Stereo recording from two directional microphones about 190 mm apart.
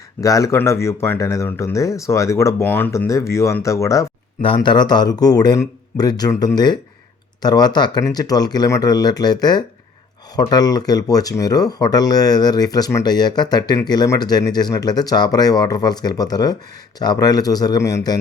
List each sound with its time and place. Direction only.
0.2 s speech: 20° left (ahead or behind)